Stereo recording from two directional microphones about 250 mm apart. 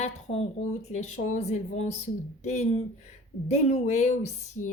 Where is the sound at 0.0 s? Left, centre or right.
Left.